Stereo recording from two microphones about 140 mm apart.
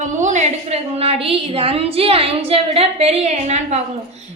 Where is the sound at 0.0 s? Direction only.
60° right (ahead or behind); by 2.3 s 45° right (ahead or behind).